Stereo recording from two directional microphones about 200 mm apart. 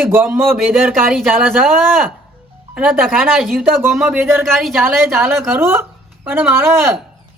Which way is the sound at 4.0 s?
Centre (ahead or behind).